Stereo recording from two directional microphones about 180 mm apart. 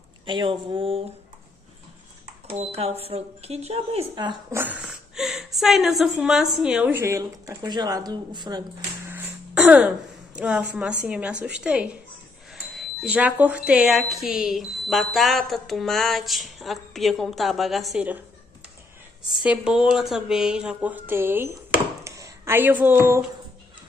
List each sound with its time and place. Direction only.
0.3 s speech: 25° right (ahead or behind)
2.4 s speech: 35° right (ahead or behind)
9.1 s throat clearing: 10° right (ahead or behind)
10.3 s a woman's voice: 5° right (ahead or behind)
19.2 s a woman's voice: 5° right (ahead or behind)
22.0 s a sound: 15° right (ahead or behind)